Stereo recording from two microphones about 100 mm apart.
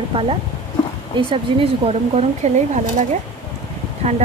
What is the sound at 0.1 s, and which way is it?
Speech, 70° right (ahead or behind).